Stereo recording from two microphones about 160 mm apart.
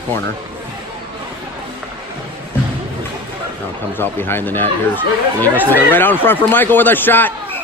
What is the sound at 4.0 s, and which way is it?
Speech, 15° left (ahead or behind).